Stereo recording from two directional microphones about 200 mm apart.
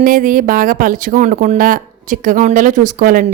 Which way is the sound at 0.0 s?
45° right (ahead or behind).